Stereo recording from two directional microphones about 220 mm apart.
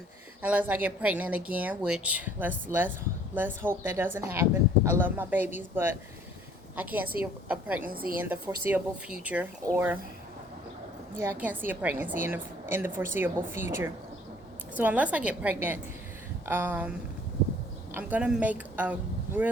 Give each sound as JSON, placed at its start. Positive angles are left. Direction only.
{"t": 0.4, "sound": "a woman's voice", "side_deg": -5}
{"t": 7.8, "sound": "a woman's voice", "side_deg": -40}
{"t": 8.2, "sound": "a woman's voice", "side_deg": -10}
{"t": 11.2, "sound": "a woman's voice", "side_deg": -10}
{"t": 17.9, "sound": "speech", "side_deg": -5}